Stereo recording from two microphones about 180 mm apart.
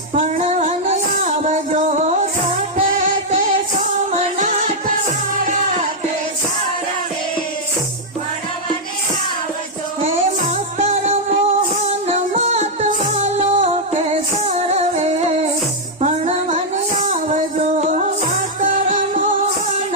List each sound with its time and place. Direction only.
0.1 s music: 40° right (ahead or behind)
10.8 s music: 40° right (ahead or behind)